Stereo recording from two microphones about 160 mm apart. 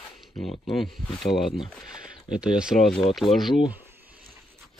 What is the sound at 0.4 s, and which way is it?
Speech, centre (ahead or behind).